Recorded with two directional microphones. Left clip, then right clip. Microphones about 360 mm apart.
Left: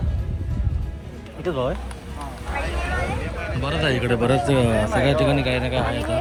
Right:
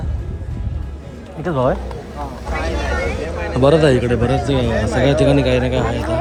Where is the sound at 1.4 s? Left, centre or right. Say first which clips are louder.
Right 7 dB; right.